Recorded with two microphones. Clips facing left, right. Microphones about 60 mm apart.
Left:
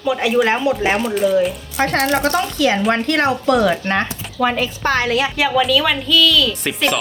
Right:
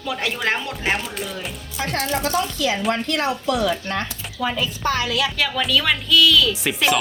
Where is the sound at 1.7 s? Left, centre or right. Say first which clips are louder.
Left 7 dB; left.